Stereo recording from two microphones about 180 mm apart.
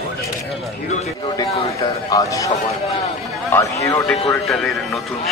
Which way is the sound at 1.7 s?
20° left (ahead or behind).